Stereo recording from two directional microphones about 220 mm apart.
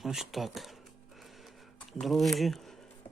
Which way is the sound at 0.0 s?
Centre (ahead or behind).